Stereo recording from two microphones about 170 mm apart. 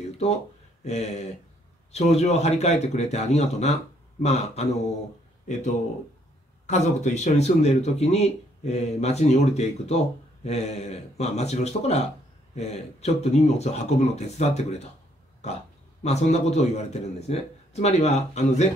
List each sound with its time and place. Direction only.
0.8 s speech: 40° left (ahead or behind)
6.6 s speech: 45° left (ahead or behind)